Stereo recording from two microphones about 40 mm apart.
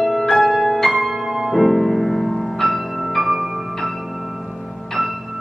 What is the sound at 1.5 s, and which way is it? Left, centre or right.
Music, centre.